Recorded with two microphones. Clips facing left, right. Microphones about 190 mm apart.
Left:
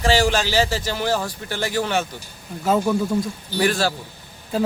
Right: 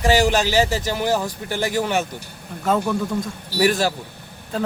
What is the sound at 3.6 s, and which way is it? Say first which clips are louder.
Speech: right 2 dB; 15° right (ahead or behind).